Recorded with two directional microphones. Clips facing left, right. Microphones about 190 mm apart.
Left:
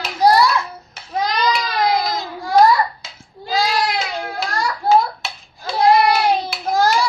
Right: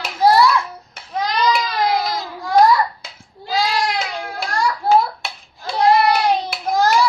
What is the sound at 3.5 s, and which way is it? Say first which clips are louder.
Child singing: left 1 dB; centre (ahead or behind).